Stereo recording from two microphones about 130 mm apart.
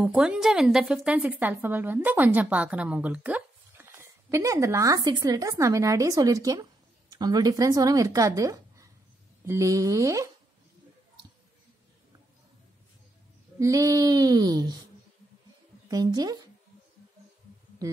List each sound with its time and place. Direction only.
0.0 s a woman's voice: 10° right (ahead or behind); by 10.3 s 25° right (ahead or behind)
13.6 s female singing: 25° right (ahead or behind)
15.9 s speech: 30° right (ahead or behind)